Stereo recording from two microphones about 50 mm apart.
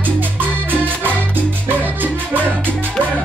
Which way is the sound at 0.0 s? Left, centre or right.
Right.